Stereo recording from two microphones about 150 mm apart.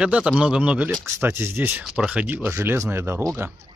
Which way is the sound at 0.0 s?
5° right (ahead or behind).